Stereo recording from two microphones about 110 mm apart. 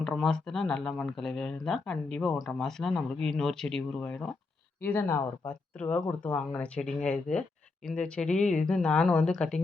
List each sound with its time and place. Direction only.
0.2 s speech: 5° left (ahead or behind)
4.8 s speech: 20° left (ahead or behind)